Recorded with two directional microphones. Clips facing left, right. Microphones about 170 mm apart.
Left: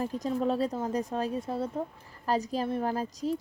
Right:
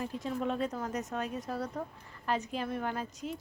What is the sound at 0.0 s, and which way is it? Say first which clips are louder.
Speech: left 5 dB; 35° left (ahead or behind).